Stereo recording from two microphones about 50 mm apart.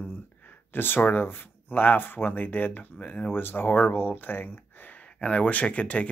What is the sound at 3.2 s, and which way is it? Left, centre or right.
Speech, left.